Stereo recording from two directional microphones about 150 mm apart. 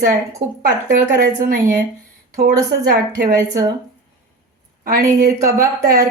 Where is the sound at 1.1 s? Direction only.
80° right.